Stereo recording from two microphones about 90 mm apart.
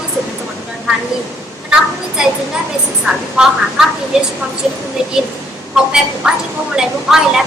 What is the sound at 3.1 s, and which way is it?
Speech, 5° right (ahead or behind).